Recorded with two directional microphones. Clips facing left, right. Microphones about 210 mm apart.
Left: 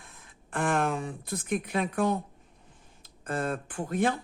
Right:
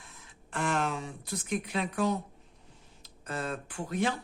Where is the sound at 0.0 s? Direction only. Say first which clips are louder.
Left 1 dB; 55° left (ahead or behind).